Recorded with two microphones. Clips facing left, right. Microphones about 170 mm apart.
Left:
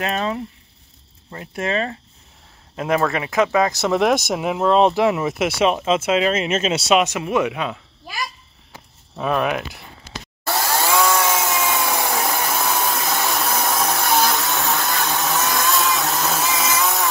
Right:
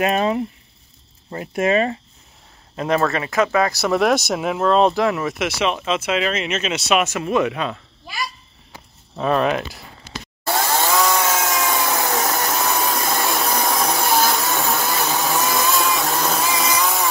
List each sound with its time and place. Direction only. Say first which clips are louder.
0.0 s speech: right 4 dB; 15° right (ahead or behind)
1.4 s speech: right 5 dB; 15° right (ahead or behind)
2.7 s speech: even; 5° left (ahead or behind); by 7.0 s 30° left (ahead or behind)
7.0 s speech: even; 15° left (ahead or behind)
9.2 s speech: right 2 dB; 5° left (ahead or behind)
10.4 s chainsaw: right 1 dB; centre (ahead or behind)